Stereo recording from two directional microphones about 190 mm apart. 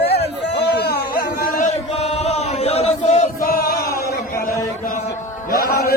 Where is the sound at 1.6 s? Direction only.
35° left (ahead or behind).